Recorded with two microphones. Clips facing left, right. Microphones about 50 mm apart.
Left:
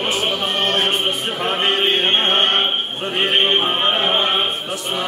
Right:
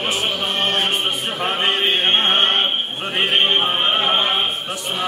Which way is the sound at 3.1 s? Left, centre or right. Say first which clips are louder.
Left 1 dB; centre.